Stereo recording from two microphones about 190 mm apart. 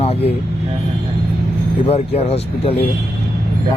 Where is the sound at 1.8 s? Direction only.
30° left (ahead or behind).